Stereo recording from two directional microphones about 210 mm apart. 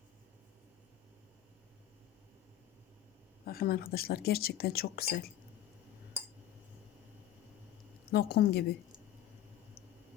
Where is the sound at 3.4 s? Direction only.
45° left (ahead or behind).